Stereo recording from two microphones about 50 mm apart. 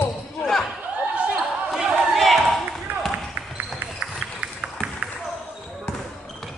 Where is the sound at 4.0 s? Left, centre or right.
Centre.